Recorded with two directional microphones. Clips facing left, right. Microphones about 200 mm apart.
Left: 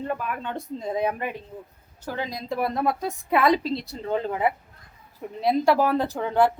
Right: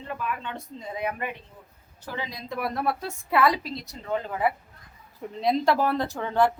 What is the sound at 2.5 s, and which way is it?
A woman's voice, 25° left (ahead or behind).